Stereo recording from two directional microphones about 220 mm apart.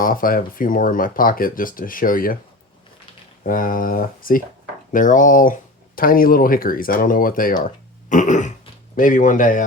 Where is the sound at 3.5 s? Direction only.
40° left (ahead or behind).